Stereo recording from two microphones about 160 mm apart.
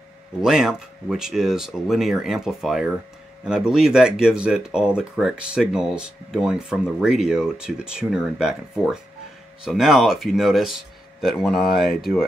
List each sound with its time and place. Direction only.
0.4 s speech: 5° right (ahead or behind)